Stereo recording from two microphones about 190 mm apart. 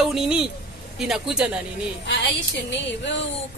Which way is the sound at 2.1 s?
70° left (ahead or behind).